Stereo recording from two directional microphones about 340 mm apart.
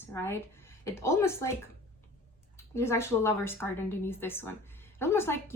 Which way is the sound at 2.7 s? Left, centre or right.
Centre.